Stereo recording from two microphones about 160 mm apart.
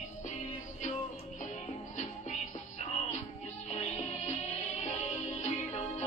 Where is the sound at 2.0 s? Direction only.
45° left (ahead or behind).